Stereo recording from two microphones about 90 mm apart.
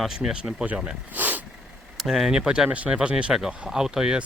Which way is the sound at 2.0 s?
5° right (ahead or behind).